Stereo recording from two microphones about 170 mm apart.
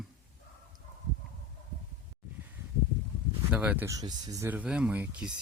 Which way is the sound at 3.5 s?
10° right (ahead or behind).